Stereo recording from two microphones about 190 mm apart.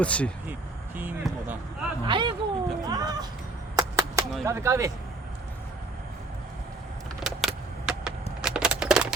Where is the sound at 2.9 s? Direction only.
20° right (ahead or behind).